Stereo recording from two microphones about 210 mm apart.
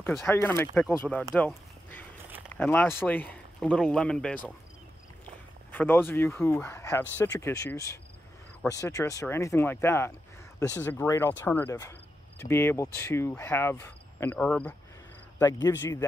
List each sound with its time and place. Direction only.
0.0 s speech: centre (ahead or behind)
0.3 s speech: 10° left (ahead or behind)
1.3 s a sound: 10° left (ahead or behind)
2.5 s speech: 10° left (ahead or behind)
5.7 s speech: 10° left (ahead or behind)